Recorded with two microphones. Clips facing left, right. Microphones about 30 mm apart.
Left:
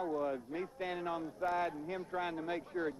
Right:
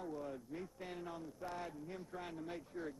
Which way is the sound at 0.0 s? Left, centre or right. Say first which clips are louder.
Left 9 dB; left.